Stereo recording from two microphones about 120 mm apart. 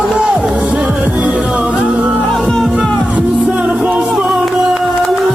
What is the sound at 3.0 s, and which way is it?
Music, 10° right (ahead or behind).